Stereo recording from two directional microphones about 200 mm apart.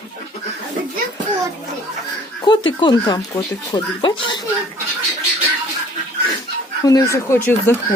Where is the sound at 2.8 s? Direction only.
20° left (ahead or behind).